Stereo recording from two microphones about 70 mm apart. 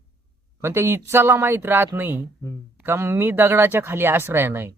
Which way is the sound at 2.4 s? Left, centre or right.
Left.